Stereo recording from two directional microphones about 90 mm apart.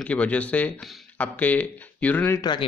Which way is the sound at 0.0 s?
15° left (ahead or behind).